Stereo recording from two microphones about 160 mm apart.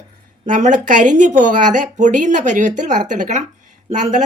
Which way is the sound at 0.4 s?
50° right (ahead or behind).